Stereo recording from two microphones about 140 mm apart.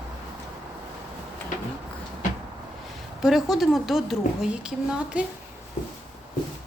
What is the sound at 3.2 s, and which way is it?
A woman's voice, 5° right (ahead or behind).